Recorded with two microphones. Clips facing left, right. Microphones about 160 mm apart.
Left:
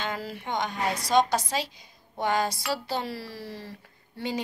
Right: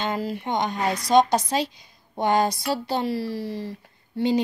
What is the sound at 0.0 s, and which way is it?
Speech, 20° right (ahead or behind).